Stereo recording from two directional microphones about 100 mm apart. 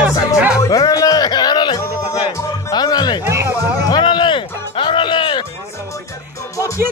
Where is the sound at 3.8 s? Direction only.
50° left (ahead or behind).